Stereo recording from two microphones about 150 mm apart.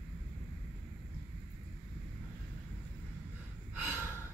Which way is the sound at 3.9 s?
15° right (ahead or behind).